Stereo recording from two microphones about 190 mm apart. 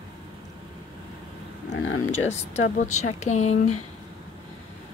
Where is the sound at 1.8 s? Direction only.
90° left.